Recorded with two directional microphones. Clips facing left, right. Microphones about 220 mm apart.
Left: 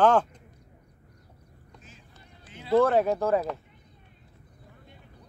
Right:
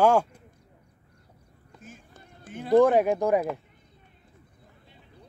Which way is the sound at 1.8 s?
50° right (ahead or behind).